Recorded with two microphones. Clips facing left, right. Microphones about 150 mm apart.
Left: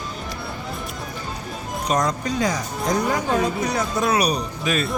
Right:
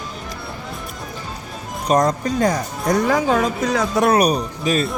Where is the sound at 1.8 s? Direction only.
50° right (ahead or behind).